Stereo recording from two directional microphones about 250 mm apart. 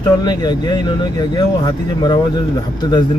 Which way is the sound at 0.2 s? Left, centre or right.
Centre.